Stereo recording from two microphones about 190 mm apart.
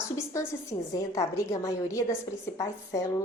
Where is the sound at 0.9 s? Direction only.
15° left (ahead or behind).